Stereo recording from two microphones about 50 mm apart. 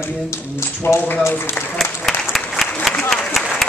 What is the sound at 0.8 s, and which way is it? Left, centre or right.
Speech, left.